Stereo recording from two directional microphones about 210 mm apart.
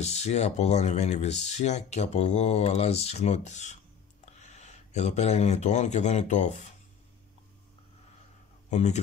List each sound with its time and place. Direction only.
0.0 s speech: 30° left (ahead or behind)
8.6 s speech: 35° left (ahead or behind)